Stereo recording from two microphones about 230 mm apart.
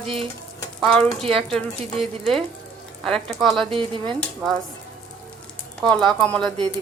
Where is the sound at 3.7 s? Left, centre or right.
Right.